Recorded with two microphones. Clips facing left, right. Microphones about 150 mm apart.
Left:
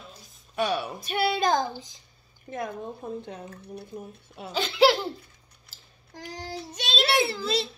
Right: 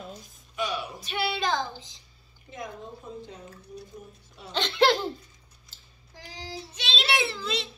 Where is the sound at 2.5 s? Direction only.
60° left (ahead or behind).